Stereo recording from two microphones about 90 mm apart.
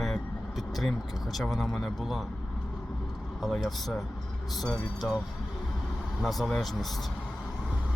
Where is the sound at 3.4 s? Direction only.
Centre (ahead or behind).